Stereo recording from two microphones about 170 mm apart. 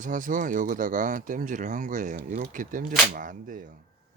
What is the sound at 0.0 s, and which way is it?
Speech, 50° right (ahead or behind).